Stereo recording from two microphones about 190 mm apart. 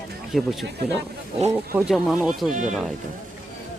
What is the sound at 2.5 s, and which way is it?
Speech, 40° right (ahead or behind).